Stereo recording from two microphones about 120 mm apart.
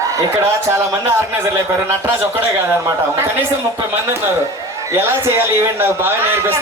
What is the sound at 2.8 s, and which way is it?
Speech, 20° right (ahead or behind).